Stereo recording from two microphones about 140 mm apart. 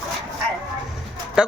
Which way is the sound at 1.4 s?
5° right (ahead or behind).